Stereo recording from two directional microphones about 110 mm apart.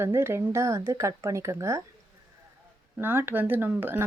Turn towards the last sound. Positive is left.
turn(degrees=-20)  # may be behind; listen again after turning